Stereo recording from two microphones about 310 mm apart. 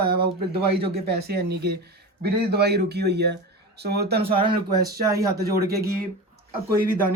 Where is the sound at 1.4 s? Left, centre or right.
Right.